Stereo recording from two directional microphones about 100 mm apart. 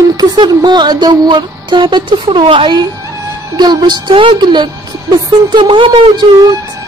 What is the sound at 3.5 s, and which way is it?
Music, 45° right (ahead or behind).